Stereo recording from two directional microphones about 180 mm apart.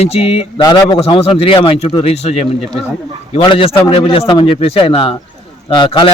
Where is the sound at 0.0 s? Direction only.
35° left (ahead or behind).